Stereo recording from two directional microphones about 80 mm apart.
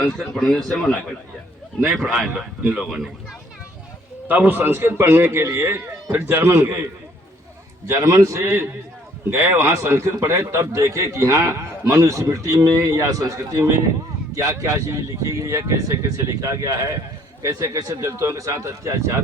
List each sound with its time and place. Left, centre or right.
0.3 s speech: centre
2.3 s speech: centre
4.3 s a man's voice: right
7.9 s speech: right